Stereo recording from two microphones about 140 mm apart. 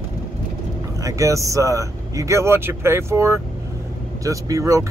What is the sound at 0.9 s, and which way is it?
Speech, 25° right (ahead or behind).